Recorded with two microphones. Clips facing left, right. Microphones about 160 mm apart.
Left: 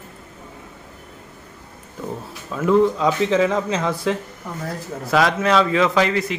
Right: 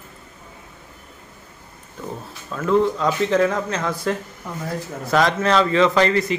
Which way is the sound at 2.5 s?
5° left (ahead or behind).